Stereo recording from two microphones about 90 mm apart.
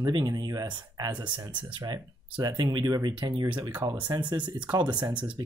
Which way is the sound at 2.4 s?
50° right (ahead or behind).